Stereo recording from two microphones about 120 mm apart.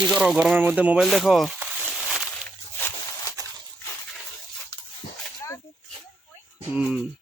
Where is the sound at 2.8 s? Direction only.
25° left (ahead or behind).